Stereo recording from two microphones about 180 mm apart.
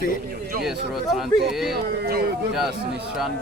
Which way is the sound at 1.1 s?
Centre (ahead or behind).